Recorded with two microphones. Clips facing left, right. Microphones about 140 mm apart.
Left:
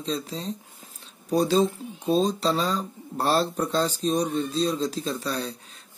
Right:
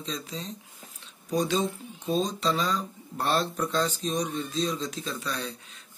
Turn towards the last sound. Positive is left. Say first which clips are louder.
# left 5 dB
turn(degrees=35)  # may be behind; listen again after turning